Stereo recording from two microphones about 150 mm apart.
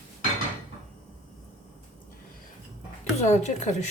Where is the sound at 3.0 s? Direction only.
50° left (ahead or behind).